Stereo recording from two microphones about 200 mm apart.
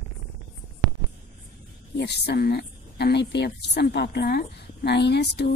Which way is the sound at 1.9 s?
55° left (ahead or behind).